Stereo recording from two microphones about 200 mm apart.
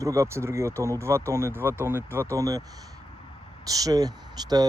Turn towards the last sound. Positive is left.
turn(degrees=-20)  # may be behind; listen again after turning